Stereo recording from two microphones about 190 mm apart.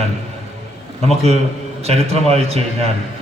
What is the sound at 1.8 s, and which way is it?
A man's voice, 35° right (ahead or behind).